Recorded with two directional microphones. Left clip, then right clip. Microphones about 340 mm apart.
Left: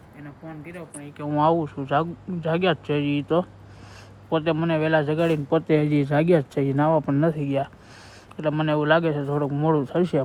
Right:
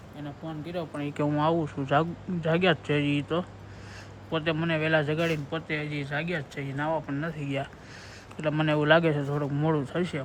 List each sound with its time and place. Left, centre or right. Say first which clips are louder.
0.9 s speech: right 6 dB; centre
1.2 s speech: left 5 dB; centre